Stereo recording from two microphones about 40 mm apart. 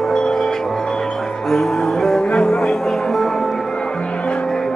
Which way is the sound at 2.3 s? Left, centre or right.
Left.